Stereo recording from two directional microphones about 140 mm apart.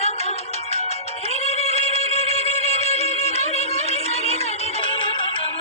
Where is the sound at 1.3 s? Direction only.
50° left (ahead or behind).